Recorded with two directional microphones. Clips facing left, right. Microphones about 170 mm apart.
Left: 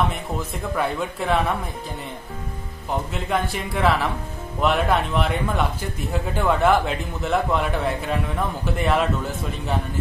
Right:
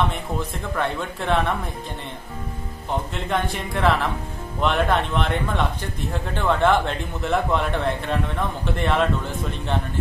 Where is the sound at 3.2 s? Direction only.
Centre (ahead or behind).